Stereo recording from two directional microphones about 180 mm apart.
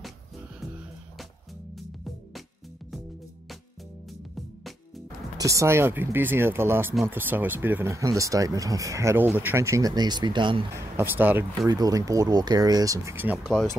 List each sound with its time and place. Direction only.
1.8 s music: centre (ahead or behind)
4.1 s music: centre (ahead or behind)
5.4 s speech: 15° right (ahead or behind)
10.7 s speech: 10° right (ahead or behind)